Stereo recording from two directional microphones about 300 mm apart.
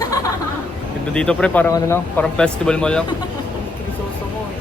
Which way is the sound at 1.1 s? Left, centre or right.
Centre.